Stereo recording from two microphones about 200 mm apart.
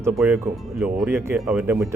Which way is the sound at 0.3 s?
10° right (ahead or behind).